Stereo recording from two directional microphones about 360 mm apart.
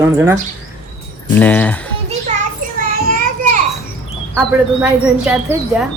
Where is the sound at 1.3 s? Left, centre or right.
Centre.